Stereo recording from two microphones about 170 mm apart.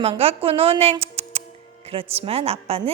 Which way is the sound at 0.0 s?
35° right (ahead or behind).